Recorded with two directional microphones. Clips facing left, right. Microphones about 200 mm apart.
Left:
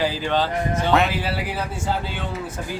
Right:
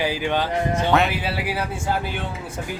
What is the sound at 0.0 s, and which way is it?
Speech, 15° right (ahead or behind).